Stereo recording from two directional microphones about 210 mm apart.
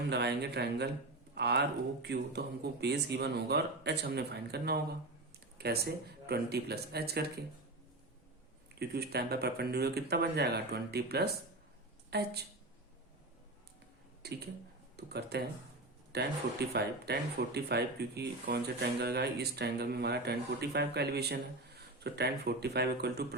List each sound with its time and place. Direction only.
0.1 s speech: 50° right (ahead or behind)
8.7 s speech: 50° right (ahead or behind)
14.2 s speech: 50° right (ahead or behind)